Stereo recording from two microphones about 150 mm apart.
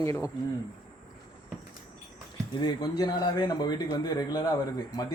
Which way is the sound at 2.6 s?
25° left (ahead or behind).